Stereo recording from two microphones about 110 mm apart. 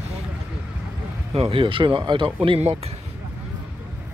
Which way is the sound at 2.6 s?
75° right (ahead or behind).